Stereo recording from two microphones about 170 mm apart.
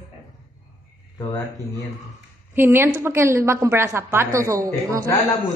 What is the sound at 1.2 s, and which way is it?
Speech, 20° left (ahead or behind).